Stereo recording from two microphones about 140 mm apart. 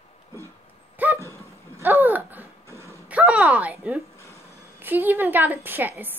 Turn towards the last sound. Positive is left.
turn(degrees=-15)  # may be behind; listen again after turning